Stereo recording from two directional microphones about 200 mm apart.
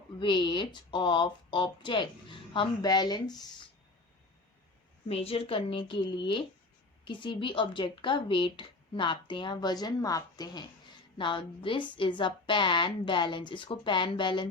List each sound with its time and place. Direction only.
0.2 s speech: 25° left (ahead or behind)
5.0 s speech: 30° left (ahead or behind)